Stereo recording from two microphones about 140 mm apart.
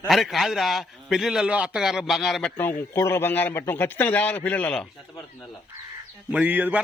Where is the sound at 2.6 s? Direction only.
15° left (ahead or behind).